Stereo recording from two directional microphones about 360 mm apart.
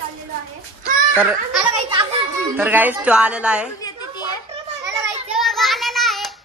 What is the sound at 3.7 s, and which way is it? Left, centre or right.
Children playing, centre.